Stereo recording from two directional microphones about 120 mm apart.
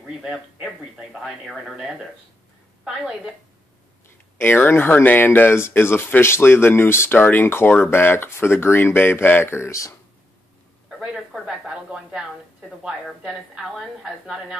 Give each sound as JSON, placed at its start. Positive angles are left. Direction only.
{"t": 0.0, "sound": "speech", "side_deg": -5}
{"t": 4.4, "sound": "speech", "side_deg": 20}
{"t": 10.9, "sound": "speech", "side_deg": 0}